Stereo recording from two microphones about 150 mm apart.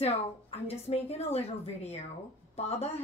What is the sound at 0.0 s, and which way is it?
A woman's voice, 40° left (ahead or behind).